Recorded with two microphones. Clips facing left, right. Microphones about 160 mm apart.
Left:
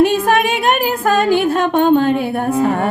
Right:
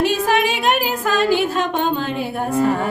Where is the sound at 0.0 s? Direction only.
55° left (ahead or behind).